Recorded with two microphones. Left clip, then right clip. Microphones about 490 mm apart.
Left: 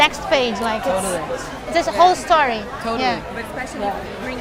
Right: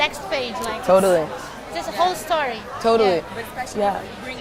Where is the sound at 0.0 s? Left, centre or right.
Left.